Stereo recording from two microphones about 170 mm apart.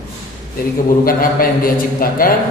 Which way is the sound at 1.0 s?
55° left (ahead or behind).